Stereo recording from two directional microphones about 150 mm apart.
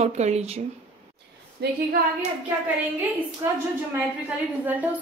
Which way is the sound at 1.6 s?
90° right.